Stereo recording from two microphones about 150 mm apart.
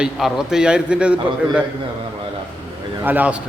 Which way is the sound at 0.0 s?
5° right (ahead or behind).